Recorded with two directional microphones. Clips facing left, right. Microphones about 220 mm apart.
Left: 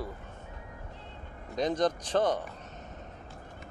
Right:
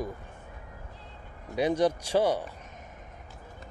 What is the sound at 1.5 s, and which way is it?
Speech, 10° right (ahead or behind).